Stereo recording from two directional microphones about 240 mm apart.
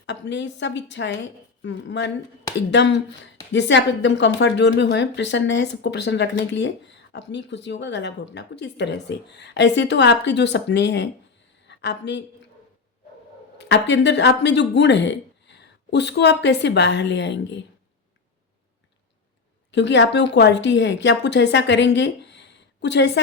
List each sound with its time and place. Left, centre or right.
0.0 s a woman's voice: left
13.6 s speech: left
19.7 s speech: left